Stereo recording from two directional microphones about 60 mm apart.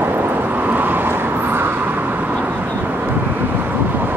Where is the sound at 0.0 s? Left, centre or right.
Right.